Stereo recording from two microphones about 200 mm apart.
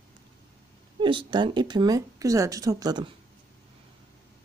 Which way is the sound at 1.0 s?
25° right (ahead or behind).